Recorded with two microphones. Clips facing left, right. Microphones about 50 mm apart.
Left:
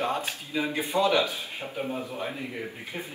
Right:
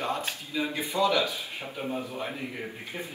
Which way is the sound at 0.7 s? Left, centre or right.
Left.